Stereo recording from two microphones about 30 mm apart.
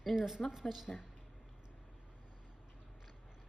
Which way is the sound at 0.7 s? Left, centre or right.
Centre.